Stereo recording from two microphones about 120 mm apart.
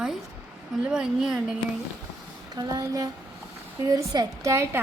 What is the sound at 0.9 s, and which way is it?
Speech, 5° right (ahead or behind).